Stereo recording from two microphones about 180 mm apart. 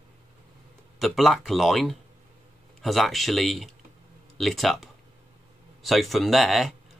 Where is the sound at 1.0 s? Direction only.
Centre (ahead or behind).